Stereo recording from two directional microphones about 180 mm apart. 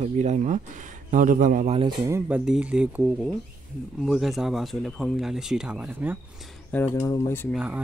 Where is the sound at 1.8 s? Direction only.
20° right (ahead or behind).